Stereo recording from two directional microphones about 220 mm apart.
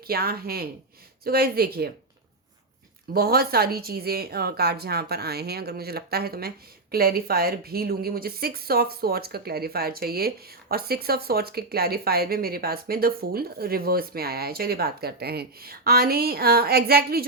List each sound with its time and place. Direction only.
0.1 s speech: 45° right (ahead or behind)
3.1 s speech: 45° right (ahead or behind)